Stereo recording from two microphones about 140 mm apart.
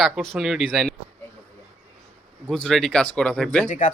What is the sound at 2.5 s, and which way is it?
Speech, 5° left (ahead or behind).